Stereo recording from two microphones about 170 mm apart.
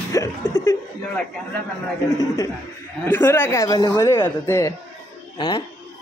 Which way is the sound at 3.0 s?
10° left (ahead or behind).